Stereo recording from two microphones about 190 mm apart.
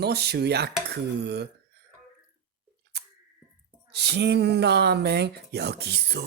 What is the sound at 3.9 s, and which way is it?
Speech, 60° right (ahead or behind).